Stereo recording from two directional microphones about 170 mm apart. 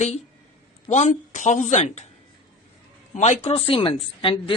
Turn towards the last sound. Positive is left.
turn(degrees=30)  # may be behind; listen again after turning